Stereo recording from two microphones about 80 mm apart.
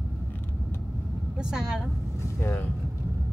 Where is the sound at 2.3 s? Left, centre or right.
Left.